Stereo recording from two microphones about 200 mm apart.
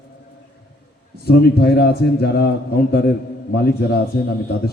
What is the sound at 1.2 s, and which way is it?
A man's voice, 50° left (ahead or behind).